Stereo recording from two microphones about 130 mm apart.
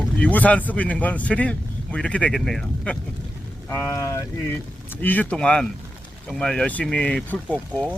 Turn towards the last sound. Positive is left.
turn(degrees=10)  # may be behind; listen again after turning